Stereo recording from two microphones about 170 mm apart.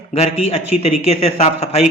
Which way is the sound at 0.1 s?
35° left (ahead or behind).